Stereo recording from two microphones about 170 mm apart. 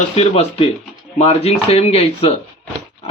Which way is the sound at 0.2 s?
35° left (ahead or behind).